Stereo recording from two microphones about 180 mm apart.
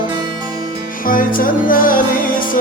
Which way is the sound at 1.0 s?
50° left (ahead or behind).